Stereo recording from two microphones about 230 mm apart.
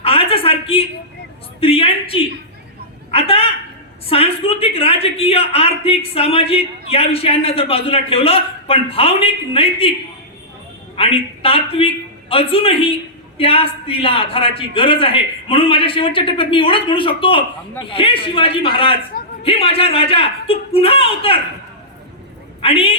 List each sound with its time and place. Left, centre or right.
0.0 s a sound: left
4.1 s a man's voice: left
10.9 s a woman's voice: left
22.6 s a man's voice: left